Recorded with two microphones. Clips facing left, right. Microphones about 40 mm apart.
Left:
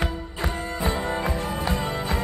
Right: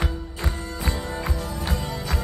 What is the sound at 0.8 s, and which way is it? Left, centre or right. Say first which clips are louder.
Music: left 5 dB; left.